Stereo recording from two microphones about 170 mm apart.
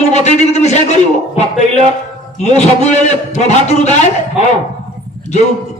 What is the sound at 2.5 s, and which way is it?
A man's voice, 40° left (ahead or behind).